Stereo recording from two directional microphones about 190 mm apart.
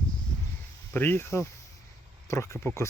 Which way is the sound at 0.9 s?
10° left (ahead or behind).